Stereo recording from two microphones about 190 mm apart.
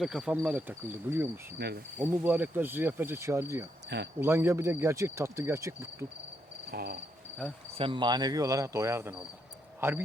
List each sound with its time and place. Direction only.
0.0 s speech: 5° right (ahead or behind)
1.5 s cricket: 60° right (ahead or behind)
2.0 s speech: 10° right (ahead or behind)
3.8 s speech: 65° right (ahead or behind)
4.2 s speech: 15° right (ahead or behind)
6.7 s cricket: 55° right (ahead or behind)
7.8 s speech: 25° right (ahead or behind)